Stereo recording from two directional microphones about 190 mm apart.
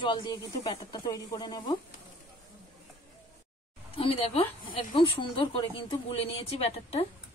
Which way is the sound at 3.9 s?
30° left (ahead or behind).